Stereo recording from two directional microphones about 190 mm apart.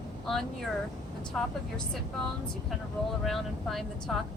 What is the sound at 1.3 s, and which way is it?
Speech, centre (ahead or behind).